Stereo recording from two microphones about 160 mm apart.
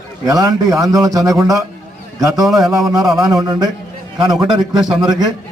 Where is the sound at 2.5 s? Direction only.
Centre (ahead or behind).